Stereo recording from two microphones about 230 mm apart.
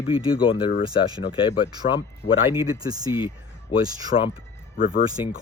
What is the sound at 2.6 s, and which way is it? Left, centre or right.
Speech, centre.